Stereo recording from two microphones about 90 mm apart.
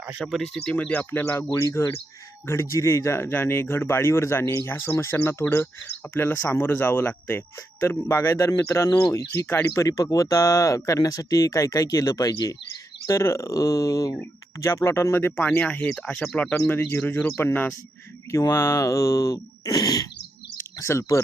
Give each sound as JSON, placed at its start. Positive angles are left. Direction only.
{"t": 0.2, "sound": "speech", "side_deg": 0}
{"t": 1.5, "sound": "speech", "side_deg": 35}
{"t": 8.9, "sound": "speech", "side_deg": 50}
{"t": 9.1, "sound": "speech", "side_deg": 35}
{"t": 15.4, "sound": "speech", "side_deg": 15}
{"t": 20.7, "sound": "speech", "side_deg": 30}